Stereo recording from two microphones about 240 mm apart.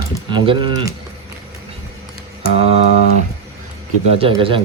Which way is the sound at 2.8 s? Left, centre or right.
Left.